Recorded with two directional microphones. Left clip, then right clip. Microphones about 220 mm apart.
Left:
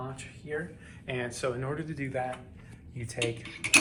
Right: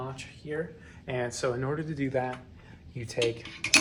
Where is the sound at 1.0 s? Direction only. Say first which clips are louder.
Right 2 dB; 45° right (ahead or behind).